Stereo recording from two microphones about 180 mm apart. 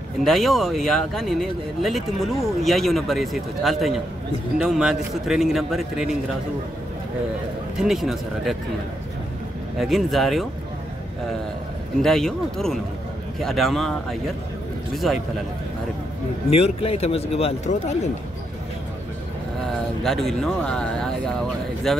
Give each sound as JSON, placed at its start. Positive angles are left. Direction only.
{"t": 0.2, "sound": "speech", "side_deg": 0}
{"t": 7.7, "sound": "speech", "side_deg": 0}
{"t": 9.8, "sound": "speech", "side_deg": 0}
{"t": 12.0, "sound": "speech", "side_deg": 0}
{"t": 16.4, "sound": "a man's voice", "side_deg": 35}
{"t": 20.0, "sound": "speech", "side_deg": 0}